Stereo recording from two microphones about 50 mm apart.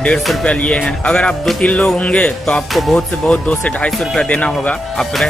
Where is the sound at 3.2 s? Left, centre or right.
Left.